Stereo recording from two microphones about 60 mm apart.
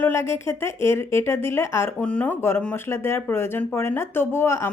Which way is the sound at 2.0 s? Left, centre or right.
Left.